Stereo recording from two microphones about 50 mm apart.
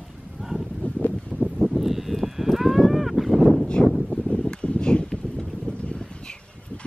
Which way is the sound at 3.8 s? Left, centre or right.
Centre.